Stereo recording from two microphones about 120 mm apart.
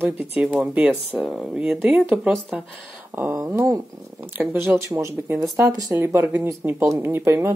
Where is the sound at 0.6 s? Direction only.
10° right (ahead or behind).